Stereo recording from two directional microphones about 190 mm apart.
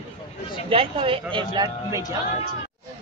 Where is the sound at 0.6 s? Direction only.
30° right (ahead or behind).